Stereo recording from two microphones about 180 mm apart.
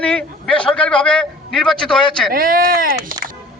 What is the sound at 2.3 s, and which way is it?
Speech, 50° right (ahead or behind).